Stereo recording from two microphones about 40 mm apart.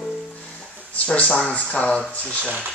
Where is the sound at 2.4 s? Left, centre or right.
Right.